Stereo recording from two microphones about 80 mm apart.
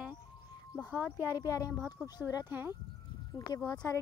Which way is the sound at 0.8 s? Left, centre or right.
Centre.